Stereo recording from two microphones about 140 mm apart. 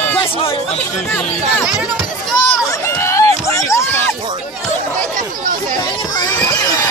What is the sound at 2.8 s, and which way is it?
Run, 20° left (ahead or behind).